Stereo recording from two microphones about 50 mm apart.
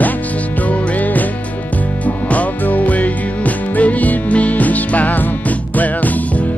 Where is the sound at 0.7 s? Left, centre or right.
Left.